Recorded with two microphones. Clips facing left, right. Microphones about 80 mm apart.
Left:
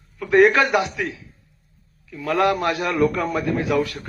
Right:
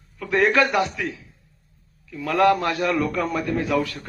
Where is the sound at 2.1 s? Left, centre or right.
Left.